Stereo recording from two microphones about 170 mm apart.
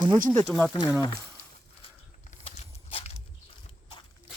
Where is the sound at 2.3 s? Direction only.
35° left (ahead or behind).